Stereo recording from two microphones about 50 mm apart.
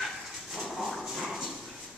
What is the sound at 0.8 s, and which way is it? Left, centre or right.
Dog, centre.